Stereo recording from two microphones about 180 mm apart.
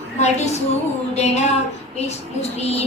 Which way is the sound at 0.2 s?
40° left (ahead or behind).